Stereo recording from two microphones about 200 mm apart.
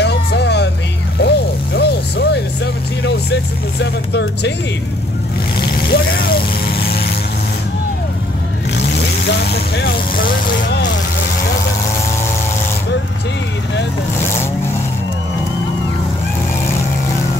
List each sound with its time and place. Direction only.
0.0 s music: 55° left (ahead or behind)
1.2 s vehicle: 55° left (ahead or behind)
3.8 s speech: 60° left (ahead or behind)
5.6 s vehicle: 55° left (ahead or behind)
8.7 s vehicle: 55° left (ahead or behind)